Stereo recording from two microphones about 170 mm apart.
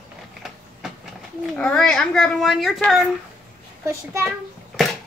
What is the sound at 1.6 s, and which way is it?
Speech, 5° left (ahead or behind).